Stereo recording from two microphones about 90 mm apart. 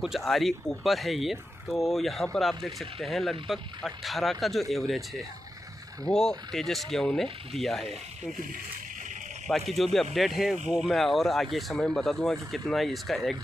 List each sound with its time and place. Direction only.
0.0 s speech: centre (ahead or behind)
9.5 s speech: centre (ahead or behind)